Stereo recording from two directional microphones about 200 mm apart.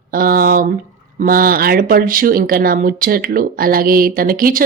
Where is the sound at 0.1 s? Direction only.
45° right (ahead or behind).